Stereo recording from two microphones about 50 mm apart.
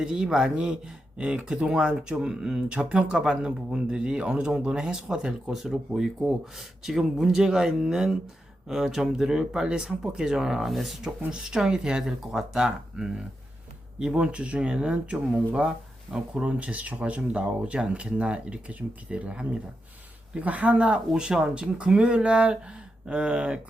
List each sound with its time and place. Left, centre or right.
0.0 s speech: centre
10.7 s speech: centre
11.3 s speech: centre